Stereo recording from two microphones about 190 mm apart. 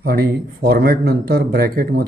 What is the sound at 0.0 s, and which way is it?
A man's voice, 55° right (ahead or behind).